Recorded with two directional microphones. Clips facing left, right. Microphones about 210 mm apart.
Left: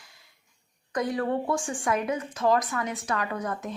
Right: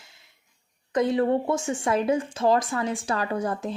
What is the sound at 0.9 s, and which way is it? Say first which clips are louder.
Speech: right 5 dB; 25° right (ahead or behind).